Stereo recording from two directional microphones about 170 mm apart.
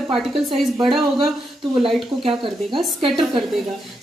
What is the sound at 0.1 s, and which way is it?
Speech, centre (ahead or behind).